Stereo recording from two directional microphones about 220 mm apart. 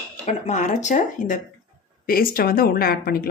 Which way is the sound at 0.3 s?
30° left (ahead or behind).